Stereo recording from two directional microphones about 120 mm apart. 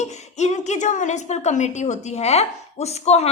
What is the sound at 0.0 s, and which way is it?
A woman's voice, 70° left (ahead or behind).